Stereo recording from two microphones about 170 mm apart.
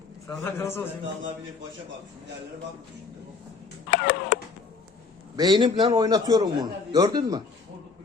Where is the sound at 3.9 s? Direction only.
80° left.